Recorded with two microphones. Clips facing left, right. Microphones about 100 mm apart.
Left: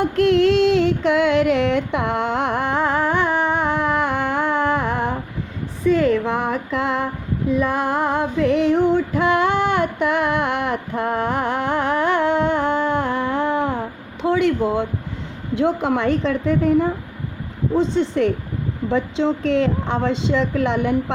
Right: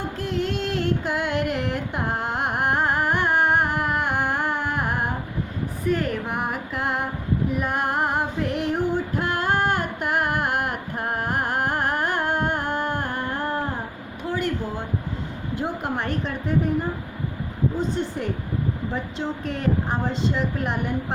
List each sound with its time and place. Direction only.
0.0 s music: 80° left
7.6 s female singing: 90° left
14.2 s a sound: 80° left
15.5 s a woman's voice: 90° left
18.2 s a woman's voice: 90° left